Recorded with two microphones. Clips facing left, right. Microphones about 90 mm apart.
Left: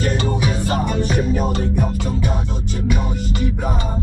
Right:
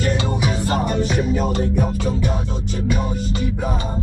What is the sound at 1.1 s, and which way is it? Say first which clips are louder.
Music: left 1 dB; 5° left (ahead or behind).